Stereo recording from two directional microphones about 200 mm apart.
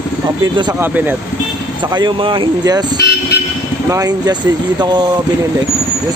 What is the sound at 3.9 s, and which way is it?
Speech, 20° right (ahead or behind).